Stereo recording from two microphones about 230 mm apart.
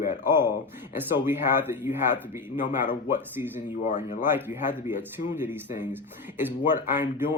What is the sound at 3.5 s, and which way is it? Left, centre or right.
Speech, left.